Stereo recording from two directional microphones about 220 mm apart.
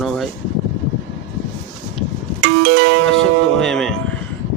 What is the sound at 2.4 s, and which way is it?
Music, 55° right (ahead or behind).